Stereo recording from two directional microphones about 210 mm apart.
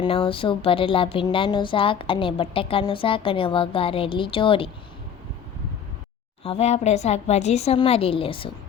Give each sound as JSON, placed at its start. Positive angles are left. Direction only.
{"t": 0.0, "sound": "speech", "side_deg": 25}
{"t": 6.4, "sound": "speech", "side_deg": 30}